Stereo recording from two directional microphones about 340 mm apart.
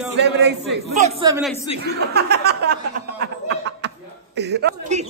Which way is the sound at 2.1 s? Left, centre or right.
Right.